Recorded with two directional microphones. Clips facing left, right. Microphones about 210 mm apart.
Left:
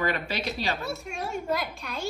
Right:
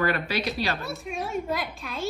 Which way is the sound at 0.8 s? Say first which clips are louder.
Right 1 dB; centre (ahead or behind).